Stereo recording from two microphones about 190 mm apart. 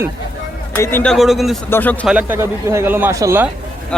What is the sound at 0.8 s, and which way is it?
Speech, 10° left (ahead or behind).